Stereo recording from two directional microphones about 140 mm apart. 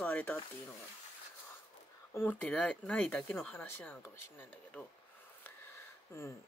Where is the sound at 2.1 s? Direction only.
10° left (ahead or behind).